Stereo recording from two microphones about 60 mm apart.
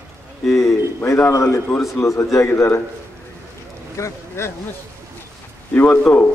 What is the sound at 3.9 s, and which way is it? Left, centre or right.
Speech, left.